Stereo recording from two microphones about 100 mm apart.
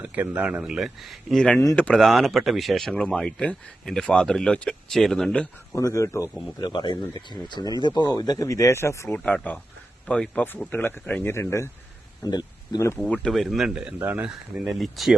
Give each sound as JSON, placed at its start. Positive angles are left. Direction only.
{"t": 0.0, "sound": "a man's voice", "side_deg": -15}
{"t": 1.3, "sound": "speech", "side_deg": 10}
{"t": 5.7, "sound": "speech", "side_deg": 30}
{"t": 6.6, "sound": "speech", "side_deg": 50}
{"t": 9.1, "sound": "a man's voice", "side_deg": 15}
{"t": 12.2, "sound": "speech", "side_deg": 45}
{"t": 13.0, "sound": "speech", "side_deg": 10}
{"t": 14.0, "sound": "a man's voice", "side_deg": -15}
{"t": 14.3, "sound": "speech", "side_deg": -5}